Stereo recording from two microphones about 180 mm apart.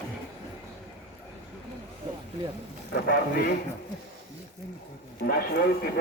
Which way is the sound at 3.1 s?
55° left (ahead or behind).